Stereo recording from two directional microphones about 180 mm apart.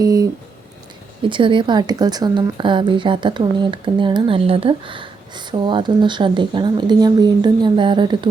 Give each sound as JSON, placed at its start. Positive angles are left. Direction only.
{"t": 0.0, "sound": "speech", "side_deg": -20}
{"t": 1.3, "sound": "a woman's voice", "side_deg": -25}